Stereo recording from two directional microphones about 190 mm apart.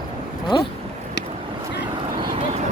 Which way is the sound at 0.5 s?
25° left (ahead or behind).